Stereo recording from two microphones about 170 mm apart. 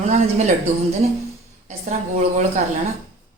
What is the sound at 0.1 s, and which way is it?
Speech, 40° right (ahead or behind).